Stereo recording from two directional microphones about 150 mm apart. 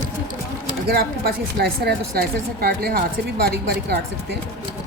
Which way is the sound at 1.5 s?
90° right.